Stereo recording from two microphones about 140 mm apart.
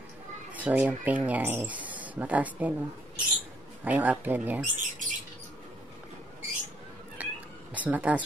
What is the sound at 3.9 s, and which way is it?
Speech, 10° right (ahead or behind).